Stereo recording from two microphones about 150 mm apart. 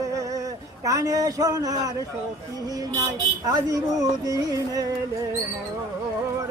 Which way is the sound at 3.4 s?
25° right (ahead or behind).